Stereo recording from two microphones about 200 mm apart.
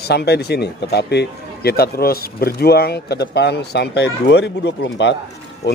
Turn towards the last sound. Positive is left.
turn(degrees=60)  # may be behind; listen again after turning